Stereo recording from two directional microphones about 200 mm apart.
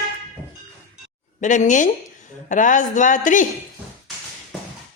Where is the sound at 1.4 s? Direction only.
40° left (ahead or behind).